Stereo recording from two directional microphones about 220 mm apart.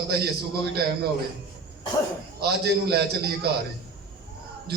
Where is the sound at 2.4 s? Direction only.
45° right (ahead or behind).